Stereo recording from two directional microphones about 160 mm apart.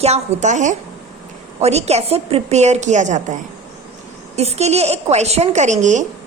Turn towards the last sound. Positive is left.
turn(degrees=-50)  # may be behind; listen again after turning